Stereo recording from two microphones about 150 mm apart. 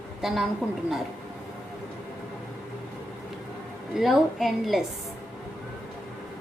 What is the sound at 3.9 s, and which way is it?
Speech, centre (ahead or behind).